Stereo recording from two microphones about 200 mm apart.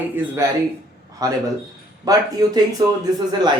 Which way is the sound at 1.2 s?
20° right (ahead or behind).